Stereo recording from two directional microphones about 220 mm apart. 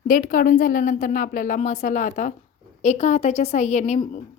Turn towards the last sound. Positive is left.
turn(degrees=30)  # may be behind; listen again after turning